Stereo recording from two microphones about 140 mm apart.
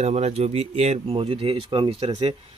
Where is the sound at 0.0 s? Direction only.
50° right (ahead or behind).